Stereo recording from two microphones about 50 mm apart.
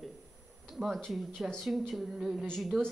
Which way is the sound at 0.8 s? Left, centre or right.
Right.